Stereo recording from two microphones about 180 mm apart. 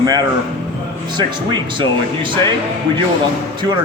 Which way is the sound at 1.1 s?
25° right (ahead or behind).